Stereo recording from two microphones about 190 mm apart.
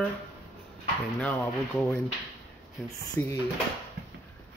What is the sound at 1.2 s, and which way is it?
Speech, 10° left (ahead or behind).